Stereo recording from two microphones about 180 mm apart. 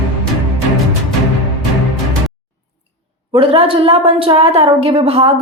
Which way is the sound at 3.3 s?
30° right (ahead or behind).